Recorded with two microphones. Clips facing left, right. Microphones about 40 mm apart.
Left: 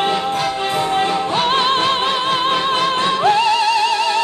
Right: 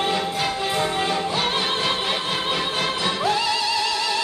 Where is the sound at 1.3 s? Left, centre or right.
Left.